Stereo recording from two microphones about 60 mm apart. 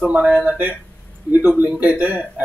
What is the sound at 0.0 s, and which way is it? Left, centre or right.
Speech, right.